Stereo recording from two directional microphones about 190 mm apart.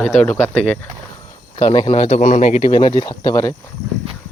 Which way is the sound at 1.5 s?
30° left (ahead or behind).